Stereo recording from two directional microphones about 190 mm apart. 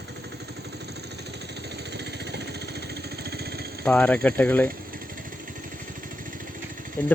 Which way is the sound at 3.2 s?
55° right (ahead or behind).